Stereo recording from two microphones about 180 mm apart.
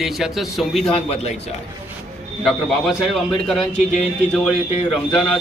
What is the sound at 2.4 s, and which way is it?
Speech, centre (ahead or behind).